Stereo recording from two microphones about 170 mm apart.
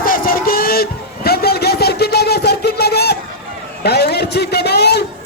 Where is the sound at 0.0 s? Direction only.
55° left (ahead or behind).